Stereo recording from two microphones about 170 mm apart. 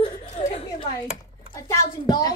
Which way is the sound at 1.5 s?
20° left (ahead or behind).